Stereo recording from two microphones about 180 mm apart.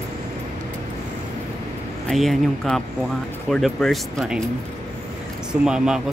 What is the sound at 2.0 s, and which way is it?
Speech, centre (ahead or behind).